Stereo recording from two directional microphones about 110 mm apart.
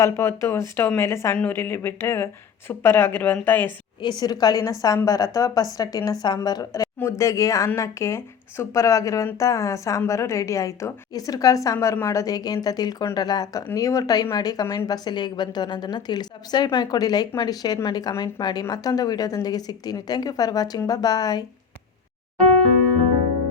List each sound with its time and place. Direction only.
0.0 s speech: 25° left (ahead or behind)
4.0 s a woman's voice: 40° left (ahead or behind)